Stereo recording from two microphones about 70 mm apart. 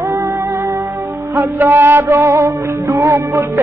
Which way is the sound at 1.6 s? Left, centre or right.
Right.